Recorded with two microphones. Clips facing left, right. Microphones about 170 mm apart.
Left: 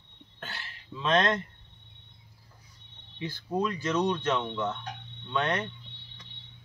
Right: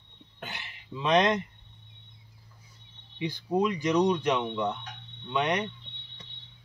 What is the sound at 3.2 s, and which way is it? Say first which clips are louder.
Speech: right 3 dB; 15° right (ahead or behind).